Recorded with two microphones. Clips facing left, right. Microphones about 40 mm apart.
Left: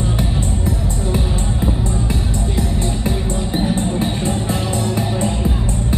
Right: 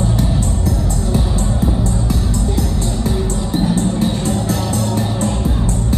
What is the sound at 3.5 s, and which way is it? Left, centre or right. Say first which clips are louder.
Music: right 3 dB; centre.